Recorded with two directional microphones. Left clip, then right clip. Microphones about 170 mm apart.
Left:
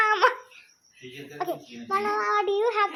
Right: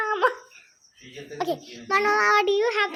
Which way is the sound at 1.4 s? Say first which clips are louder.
Right 3 dB; 45° right (ahead or behind).